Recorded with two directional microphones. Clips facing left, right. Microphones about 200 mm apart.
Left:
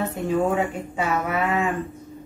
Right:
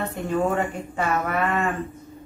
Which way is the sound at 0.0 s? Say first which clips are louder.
Left 2 dB; centre (ahead or behind).